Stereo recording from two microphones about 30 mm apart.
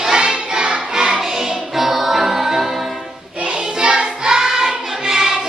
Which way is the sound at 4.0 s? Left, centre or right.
Right.